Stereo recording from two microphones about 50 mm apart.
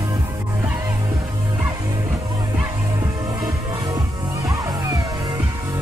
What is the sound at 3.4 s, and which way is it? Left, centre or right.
Music, right.